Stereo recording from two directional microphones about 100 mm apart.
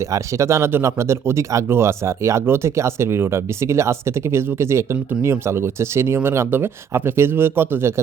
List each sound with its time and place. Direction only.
0.1 s speech: 30° right (ahead or behind)